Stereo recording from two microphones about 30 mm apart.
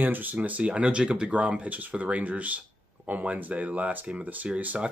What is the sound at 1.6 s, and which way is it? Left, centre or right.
Speech, right.